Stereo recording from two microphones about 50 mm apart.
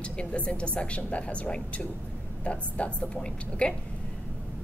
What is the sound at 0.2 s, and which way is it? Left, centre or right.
A woman's voice, left.